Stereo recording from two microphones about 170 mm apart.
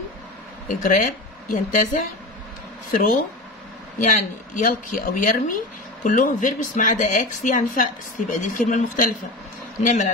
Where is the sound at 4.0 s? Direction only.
50° left (ahead or behind).